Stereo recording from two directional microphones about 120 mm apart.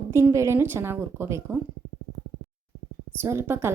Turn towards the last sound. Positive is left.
turn(degrees=-20)  # may be behind; listen again after turning